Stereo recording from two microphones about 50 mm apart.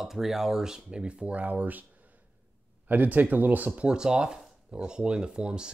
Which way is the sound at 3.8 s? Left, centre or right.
Centre.